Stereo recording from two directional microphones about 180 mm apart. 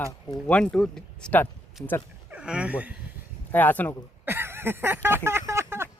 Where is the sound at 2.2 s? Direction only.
5° right (ahead or behind).